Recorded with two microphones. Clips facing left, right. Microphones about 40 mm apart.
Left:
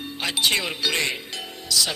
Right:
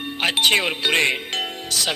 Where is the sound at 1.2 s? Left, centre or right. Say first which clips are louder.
Right 8 dB; right.